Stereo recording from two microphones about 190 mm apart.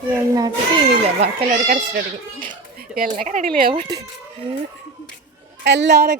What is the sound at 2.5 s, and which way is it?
Speech, 50° right (ahead or behind).